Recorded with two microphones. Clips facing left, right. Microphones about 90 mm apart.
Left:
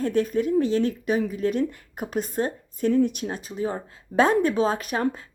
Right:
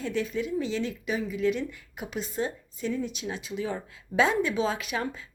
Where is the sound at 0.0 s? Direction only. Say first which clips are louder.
Left 7 dB; 50° left (ahead or behind).